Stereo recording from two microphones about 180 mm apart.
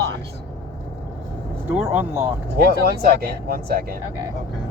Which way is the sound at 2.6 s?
60° right (ahead or behind).